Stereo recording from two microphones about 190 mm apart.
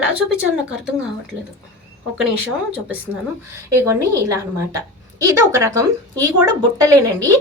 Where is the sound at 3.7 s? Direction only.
15° right (ahead or behind).